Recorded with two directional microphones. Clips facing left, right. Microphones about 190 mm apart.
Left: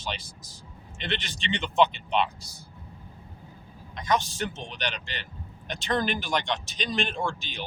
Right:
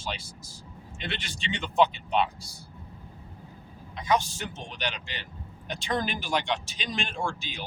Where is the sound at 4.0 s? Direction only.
10° right (ahead or behind).